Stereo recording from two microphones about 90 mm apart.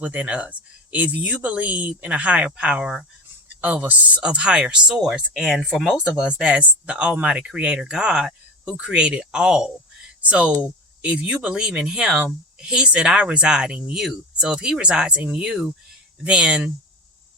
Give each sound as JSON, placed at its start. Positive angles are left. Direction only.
{"t": 0.0, "sound": "speech", "side_deg": -15}
{"t": 3.6, "sound": "speech", "side_deg": -20}